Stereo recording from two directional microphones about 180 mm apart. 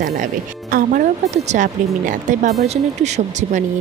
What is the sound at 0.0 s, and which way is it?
Speech, 50° right (ahead or behind).